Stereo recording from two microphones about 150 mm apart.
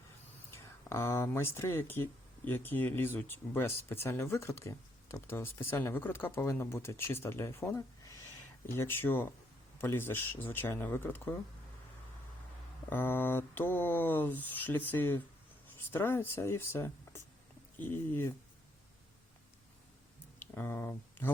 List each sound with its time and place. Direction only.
0.5 s speech: 20° left (ahead or behind)
12.9 s speech: 15° left (ahead or behind)
20.4 s speech: 15° left (ahead or behind)